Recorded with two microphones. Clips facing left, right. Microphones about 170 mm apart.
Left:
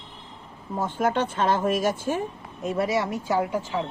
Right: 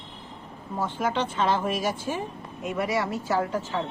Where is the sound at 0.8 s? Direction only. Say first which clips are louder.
Left 3 dB; 50° left (ahead or behind).